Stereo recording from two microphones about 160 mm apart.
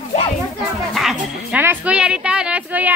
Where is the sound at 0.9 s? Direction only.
Centre (ahead or behind).